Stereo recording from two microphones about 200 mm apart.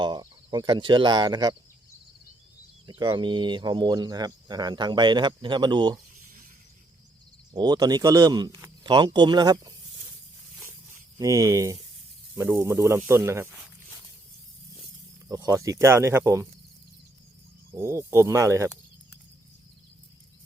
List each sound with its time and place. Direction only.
0.0 s speech: 20° right (ahead or behind)
2.8 s speech: 20° right (ahead or behind)
7.5 s speech: 20° right (ahead or behind)
11.2 s speech: 15° right (ahead or behind)
15.3 s speech: 15° right (ahead or behind)
17.7 s speech: 15° right (ahead or behind)